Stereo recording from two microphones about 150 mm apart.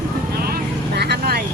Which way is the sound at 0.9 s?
90° right.